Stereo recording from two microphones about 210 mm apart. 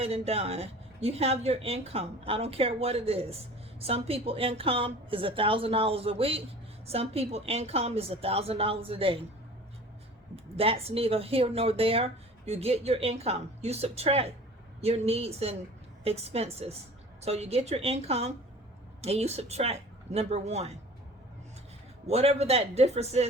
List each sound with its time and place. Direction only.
0.0 s speech: 30° right (ahead or behind)
10.6 s speech: 25° right (ahead or behind)
22.0 s speech: 30° right (ahead or behind)